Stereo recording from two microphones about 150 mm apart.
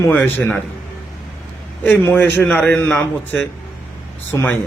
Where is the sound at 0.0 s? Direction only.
15° left (ahead or behind).